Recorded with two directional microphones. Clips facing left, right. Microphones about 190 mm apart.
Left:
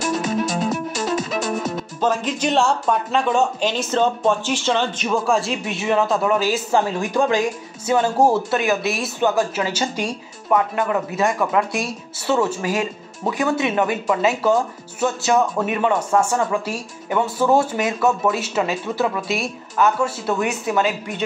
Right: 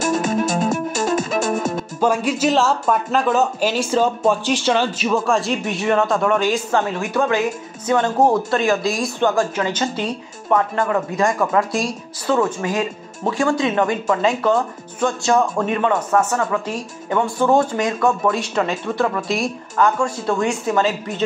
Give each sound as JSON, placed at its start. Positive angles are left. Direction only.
{"t": 0.0, "sound": "music", "side_deg": -50}
{"t": 2.0, "sound": "speech", "side_deg": -10}
{"t": 11.1, "sound": "speech", "side_deg": 5}
{"t": 13.3, "sound": "speech", "side_deg": 20}
{"t": 15.7, "sound": "speech", "side_deg": 15}
{"t": 20.3, "sound": "speech", "side_deg": 15}